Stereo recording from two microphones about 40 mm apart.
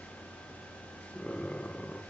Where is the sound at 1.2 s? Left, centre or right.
Left.